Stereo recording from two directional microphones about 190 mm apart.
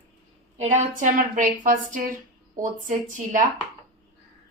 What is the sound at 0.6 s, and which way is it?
Speech, 40° right (ahead or behind).